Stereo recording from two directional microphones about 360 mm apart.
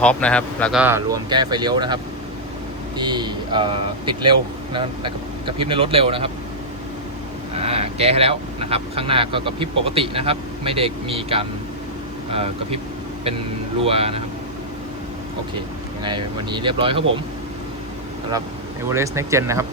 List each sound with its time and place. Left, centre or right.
0.0 s speech: centre
3.0 s speech: centre
7.5 s speech: centre
13.8 s speech: centre
16.0 s speech: centre
18.9 s speech: centre